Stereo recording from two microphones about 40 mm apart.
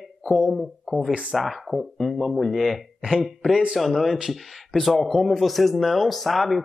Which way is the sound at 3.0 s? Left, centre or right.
Centre.